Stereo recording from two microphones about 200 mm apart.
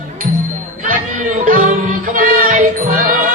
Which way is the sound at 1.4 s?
40° right (ahead or behind).